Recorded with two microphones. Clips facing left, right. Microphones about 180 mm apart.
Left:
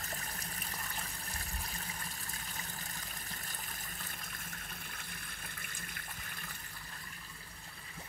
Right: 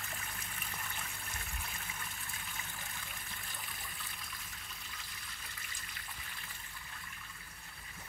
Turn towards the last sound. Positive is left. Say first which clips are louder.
# left 2 dB
turn(degrees=50)  # may be behind; listen again after turning